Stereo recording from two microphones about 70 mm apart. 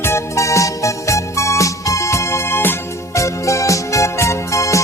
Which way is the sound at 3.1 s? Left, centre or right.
Left.